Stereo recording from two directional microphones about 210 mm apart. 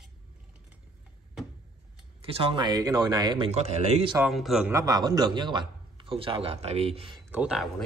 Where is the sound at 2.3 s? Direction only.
25° right (ahead or behind).